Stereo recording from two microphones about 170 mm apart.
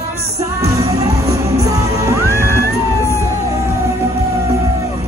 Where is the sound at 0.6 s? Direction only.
20° right (ahead or behind).